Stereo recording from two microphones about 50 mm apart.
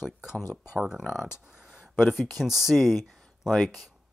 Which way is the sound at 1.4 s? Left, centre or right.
Centre.